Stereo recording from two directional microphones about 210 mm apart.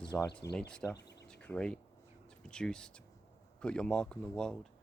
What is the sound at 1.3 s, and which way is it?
Speech, 5° left (ahead or behind).